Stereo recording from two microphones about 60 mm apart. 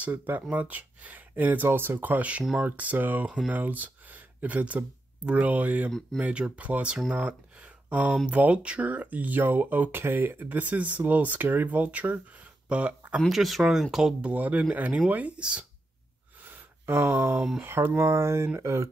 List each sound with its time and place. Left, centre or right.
0.0 s speech: right
13.3 s speech: centre
14.2 s speech: right
16.4 s a sound: right
17.6 s speech: right